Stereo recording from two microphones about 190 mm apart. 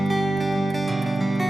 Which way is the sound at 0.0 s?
Centre (ahead or behind).